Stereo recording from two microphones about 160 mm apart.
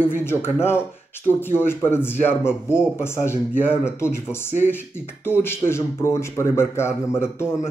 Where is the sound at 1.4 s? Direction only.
15° left (ahead or behind).